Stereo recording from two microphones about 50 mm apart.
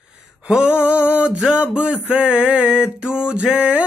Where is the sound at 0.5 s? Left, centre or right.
Right.